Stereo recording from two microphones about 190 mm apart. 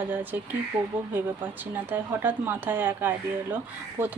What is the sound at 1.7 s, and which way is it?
Speech, 10° right (ahead or behind).